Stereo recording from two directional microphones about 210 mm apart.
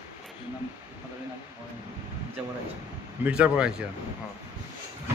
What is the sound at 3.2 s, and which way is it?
Speech, 5° right (ahead or behind).